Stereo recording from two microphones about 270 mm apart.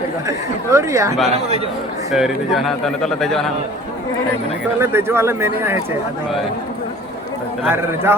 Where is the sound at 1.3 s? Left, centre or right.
Right.